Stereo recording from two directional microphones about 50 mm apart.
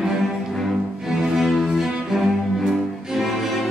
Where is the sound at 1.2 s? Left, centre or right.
Centre.